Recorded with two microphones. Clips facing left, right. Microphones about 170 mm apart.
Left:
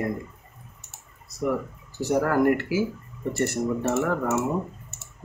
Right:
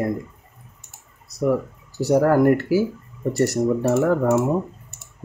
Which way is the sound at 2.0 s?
40° right (ahead or behind).